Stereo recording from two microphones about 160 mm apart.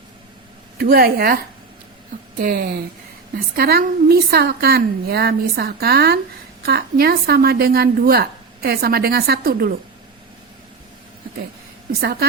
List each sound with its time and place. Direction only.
0.8 s a woman's voice: 70° right (ahead or behind)
2.4 s a woman's voice: 70° right (ahead or behind)
11.9 s a woman's voice: 85° right